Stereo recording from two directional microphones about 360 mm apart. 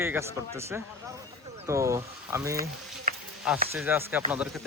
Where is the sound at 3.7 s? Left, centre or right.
Centre.